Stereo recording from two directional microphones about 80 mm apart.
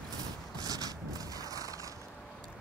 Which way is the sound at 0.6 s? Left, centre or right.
Right.